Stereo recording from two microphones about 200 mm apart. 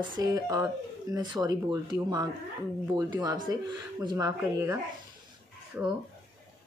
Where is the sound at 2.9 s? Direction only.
20° right (ahead or behind).